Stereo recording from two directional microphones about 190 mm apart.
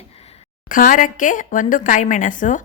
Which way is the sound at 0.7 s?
45° left (ahead or behind).